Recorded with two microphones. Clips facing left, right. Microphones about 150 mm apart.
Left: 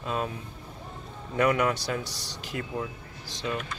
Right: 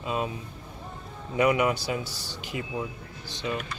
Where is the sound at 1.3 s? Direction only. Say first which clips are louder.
Right 1 dB; 10° right (ahead or behind).